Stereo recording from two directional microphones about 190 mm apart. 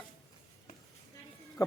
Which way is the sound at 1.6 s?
20° left (ahead or behind).